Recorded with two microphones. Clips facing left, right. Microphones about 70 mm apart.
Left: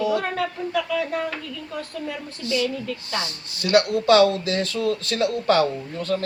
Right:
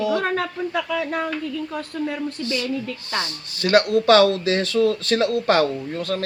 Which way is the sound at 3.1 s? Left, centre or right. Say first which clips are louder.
Right 2 dB; right.